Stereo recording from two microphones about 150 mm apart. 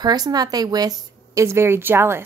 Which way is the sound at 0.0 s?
25° right (ahead or behind).